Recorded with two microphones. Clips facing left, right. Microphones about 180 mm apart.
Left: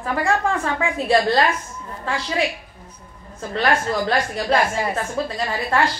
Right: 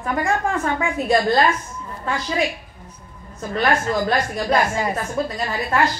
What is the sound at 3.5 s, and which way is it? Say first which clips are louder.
A woman's voice: right 1 dB; 35° left (ahead or behind).